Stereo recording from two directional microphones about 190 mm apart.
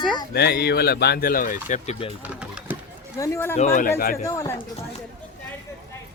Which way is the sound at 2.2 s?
10° right (ahead or behind).